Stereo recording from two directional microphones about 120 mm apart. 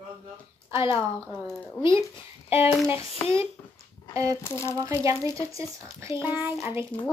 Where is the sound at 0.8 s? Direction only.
50° left (ahead or behind).